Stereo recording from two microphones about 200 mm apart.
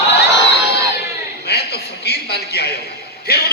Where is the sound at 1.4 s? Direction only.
55° left (ahead or behind).